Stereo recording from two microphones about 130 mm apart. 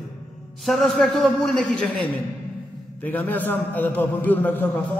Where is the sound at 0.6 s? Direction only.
Centre (ahead or behind).